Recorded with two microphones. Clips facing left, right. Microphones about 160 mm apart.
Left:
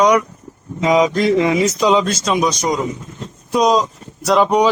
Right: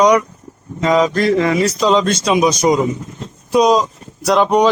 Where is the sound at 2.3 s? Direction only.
10° right (ahead or behind).